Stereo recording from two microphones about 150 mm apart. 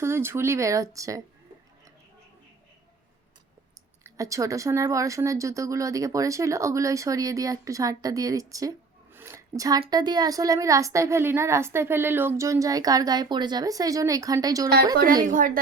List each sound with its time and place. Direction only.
0.0 s speech: 15° right (ahead or behind)
4.0 s speech: 20° right (ahead or behind)
9.1 s a sound: 15° right (ahead or behind)
9.6 s speech: 25° right (ahead or behind)
15.2 s a woman's voice: 65° right (ahead or behind)